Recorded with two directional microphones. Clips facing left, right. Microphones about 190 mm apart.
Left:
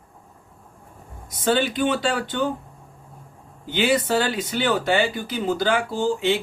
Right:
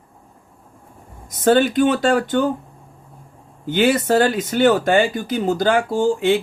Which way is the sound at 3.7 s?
45° right (ahead or behind).